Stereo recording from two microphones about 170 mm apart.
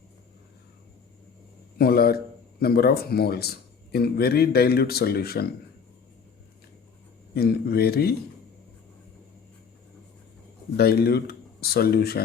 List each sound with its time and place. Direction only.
1.8 s speech: 65° left (ahead or behind)
7.3 s speech: 65° left (ahead or behind)
10.8 s speech: 65° left (ahead or behind)